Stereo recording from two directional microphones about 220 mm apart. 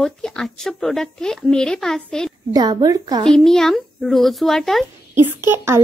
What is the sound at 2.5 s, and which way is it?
Speech, 20° right (ahead or behind).